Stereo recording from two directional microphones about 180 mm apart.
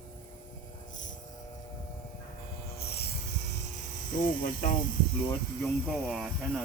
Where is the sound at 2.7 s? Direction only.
60° left (ahead or behind).